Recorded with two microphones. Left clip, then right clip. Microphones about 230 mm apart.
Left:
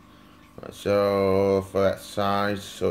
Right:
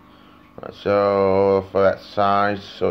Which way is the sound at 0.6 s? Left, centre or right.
Centre.